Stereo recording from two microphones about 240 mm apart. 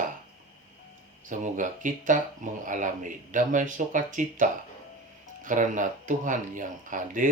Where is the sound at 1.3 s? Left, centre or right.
Right.